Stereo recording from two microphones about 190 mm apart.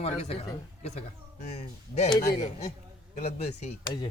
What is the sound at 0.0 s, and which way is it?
Speech, 35° left (ahead or behind).